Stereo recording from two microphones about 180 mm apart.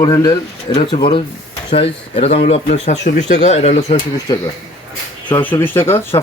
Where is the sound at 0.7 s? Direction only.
40° left (ahead or behind).